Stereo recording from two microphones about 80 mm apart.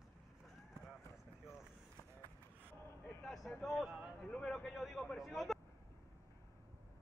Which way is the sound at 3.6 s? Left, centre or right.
Centre.